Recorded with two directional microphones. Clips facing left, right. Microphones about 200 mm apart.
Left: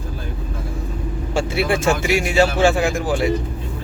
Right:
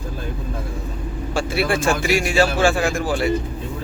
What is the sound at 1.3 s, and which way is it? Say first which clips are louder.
Speech: left 1 dB; 20° left (ahead or behind).